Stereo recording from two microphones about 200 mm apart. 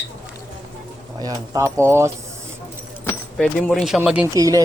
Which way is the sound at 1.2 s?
15° right (ahead or behind).